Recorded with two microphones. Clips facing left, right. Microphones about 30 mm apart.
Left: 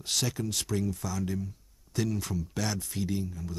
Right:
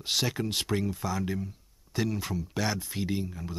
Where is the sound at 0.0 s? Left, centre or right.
Right.